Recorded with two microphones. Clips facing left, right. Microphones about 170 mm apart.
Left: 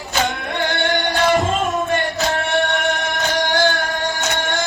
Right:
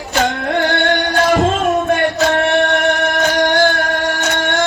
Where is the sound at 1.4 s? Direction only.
75° right (ahead or behind).